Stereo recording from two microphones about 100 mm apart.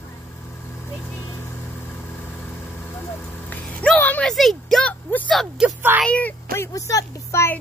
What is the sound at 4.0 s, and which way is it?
Speech, 15° left (ahead or behind).